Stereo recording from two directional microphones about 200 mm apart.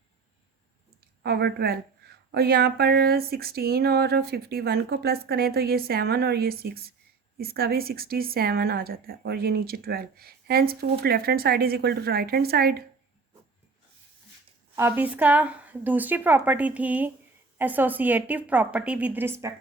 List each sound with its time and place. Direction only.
1.2 s a woman's voice: 55° right (ahead or behind)
14.8 s a woman's voice: 10° right (ahead or behind)